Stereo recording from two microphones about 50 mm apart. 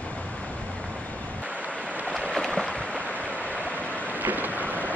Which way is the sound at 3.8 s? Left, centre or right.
Left.